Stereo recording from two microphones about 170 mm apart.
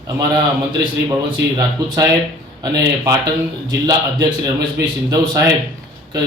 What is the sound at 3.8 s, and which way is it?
Speech, 20° right (ahead or behind).